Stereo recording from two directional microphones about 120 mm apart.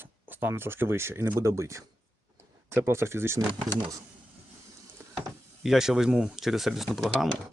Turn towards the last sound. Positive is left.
turn(degrees=0)  # may be behind; listen again after turning